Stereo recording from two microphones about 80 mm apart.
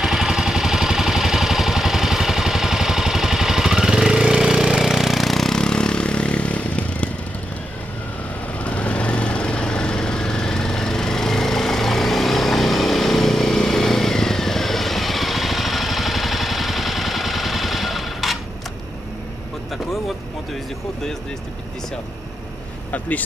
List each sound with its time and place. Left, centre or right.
0.0 s vehicle: centre
8.6 s vehicle: centre
22.8 s vehicle: centre